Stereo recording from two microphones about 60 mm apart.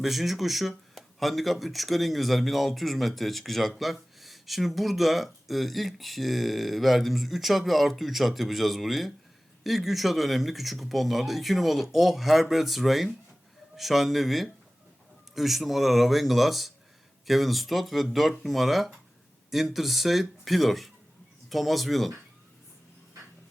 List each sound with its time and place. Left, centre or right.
0.0 s speech: centre